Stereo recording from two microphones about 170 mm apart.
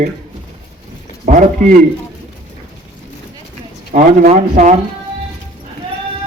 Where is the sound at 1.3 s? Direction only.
45° right (ahead or behind).